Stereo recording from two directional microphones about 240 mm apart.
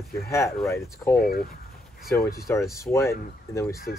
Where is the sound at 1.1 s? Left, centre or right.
Left.